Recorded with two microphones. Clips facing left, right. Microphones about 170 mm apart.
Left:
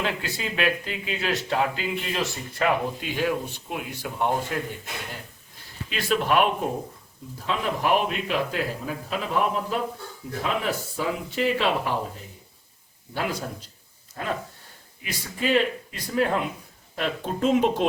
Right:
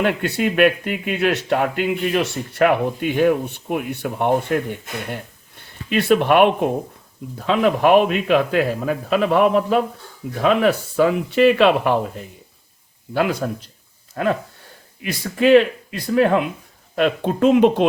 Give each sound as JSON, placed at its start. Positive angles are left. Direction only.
{"t": 0.0, "sound": "speech", "side_deg": -65}
{"t": 5.1, "sound": "a sound", "side_deg": -60}
{"t": 7.3, "sound": "speech", "side_deg": -75}
{"t": 13.4, "sound": "a man's voice", "side_deg": -90}
{"t": 14.2, "sound": "speech", "side_deg": -80}